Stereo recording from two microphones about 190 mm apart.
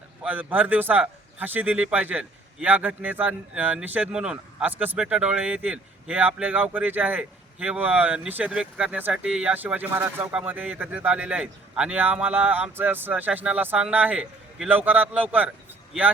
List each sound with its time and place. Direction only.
0.2 s a man's voice: 10° right (ahead or behind)